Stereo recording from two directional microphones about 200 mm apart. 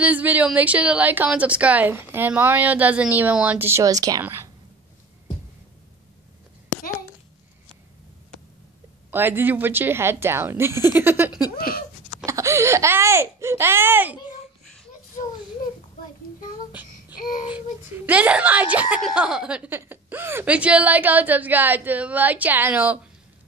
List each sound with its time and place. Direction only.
0.0 s speech: 10° right (ahead or behind)
9.1 s speech: 10° right (ahead or behind)
11.5 s a sound: 45° left (ahead or behind)
12.3 s speech: 15° right (ahead or behind)
17.1 s a sound: 45° left (ahead or behind)
17.6 s speech: 10° right (ahead or behind)